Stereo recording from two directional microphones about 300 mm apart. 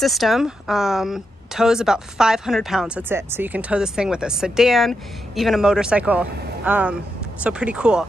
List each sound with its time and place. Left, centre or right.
0.0 s a woman's voice: centre